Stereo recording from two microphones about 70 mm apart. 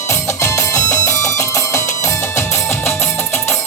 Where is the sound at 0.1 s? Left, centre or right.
Left.